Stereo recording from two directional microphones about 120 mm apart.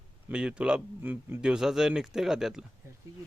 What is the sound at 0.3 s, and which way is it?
A man's voice, 10° right (ahead or behind).